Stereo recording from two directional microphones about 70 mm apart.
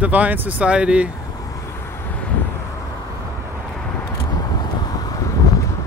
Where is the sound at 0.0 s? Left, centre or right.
Right.